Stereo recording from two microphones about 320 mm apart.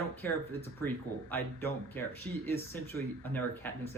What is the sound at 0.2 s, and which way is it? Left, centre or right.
Speech, centre.